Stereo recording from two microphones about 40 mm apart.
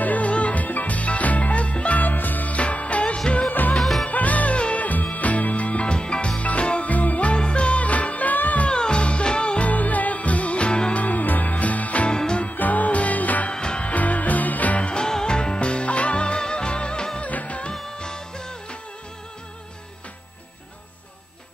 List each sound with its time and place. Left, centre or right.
0.0 s music: left
2.5 s music: left
6.9 s music: left
7.3 s music: left
8.6 s music: left
9.7 s music: left
11.0 s music: left
12.1 s music: left
12.4 s music: left
13.5 s music: left
13.9 s music: left
14.9 s music: centre
17.2 s music: left
17.9 s music: centre